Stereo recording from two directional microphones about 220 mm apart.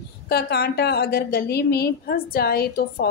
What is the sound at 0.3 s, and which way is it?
A woman's voice, 45° left (ahead or behind).